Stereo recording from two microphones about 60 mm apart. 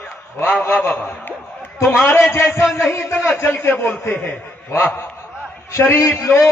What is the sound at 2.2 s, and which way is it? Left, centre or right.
A man's voice, left.